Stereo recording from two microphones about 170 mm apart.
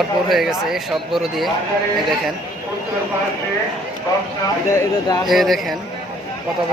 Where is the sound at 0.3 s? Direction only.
Centre (ahead or behind).